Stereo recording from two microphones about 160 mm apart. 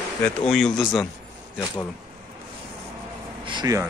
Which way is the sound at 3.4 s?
25° right (ahead or behind).